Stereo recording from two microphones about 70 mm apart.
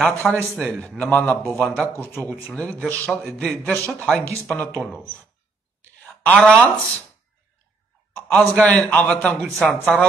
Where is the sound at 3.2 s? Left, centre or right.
Centre.